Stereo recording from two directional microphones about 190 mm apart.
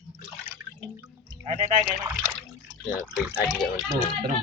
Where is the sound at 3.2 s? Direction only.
5° right (ahead or behind).